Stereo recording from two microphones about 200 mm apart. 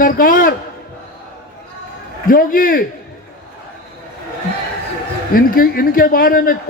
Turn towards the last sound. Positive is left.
turn(degrees=45)  # may be behind; listen again after turning